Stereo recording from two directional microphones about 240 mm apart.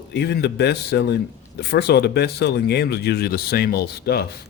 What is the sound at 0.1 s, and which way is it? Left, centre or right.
A man's voice, left.